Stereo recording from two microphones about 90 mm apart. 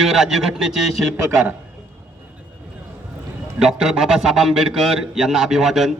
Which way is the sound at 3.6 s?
5° right (ahead or behind).